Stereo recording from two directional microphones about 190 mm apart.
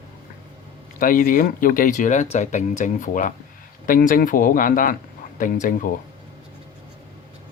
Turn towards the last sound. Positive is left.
turn(degrees=45)  # may be behind; listen again after turning